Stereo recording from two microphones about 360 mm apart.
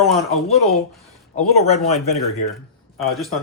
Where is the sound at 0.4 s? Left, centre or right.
Centre.